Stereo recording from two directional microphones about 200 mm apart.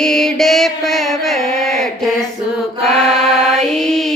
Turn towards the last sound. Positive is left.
turn(degrees=0)  # may be behind; listen again after turning